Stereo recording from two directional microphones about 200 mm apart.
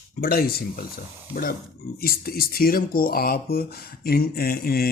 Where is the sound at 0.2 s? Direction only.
50° left (ahead or behind).